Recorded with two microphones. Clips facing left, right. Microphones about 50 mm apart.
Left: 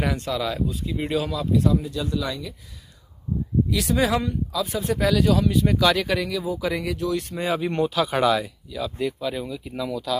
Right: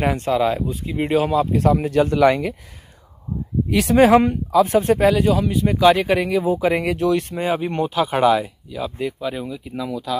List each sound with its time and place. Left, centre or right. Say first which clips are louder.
0.0 s speech: right 7 dB; right
1.6 s speech: right 6 dB; right
3.7 s speech: right 11 dB; right
5.2 s speech: right 2 dB; centre; by 7.3 s right
7.3 s speech: right 2 dB; right